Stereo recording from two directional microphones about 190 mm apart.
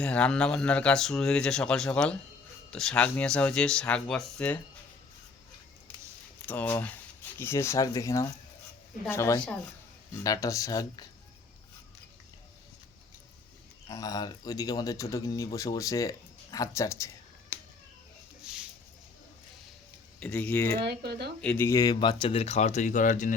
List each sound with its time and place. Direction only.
0.0 s speech: 5° left (ahead or behind)
6.4 s speech: 10° left (ahead or behind)
13.8 s speech: 20° left (ahead or behind)
18.5 s a sound: 5° right (ahead or behind)
20.1 s speech: 5° left (ahead or behind)
20.7 s speech: 55° right (ahead or behind)
21.4 s speech: 10° left (ahead or behind); by 23.3 s 40° left (ahead or behind)